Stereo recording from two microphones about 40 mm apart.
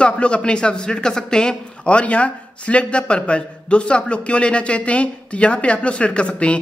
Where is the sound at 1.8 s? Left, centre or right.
Left.